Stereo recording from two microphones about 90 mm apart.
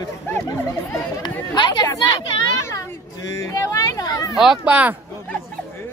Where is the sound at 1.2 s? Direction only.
50° left (ahead or behind).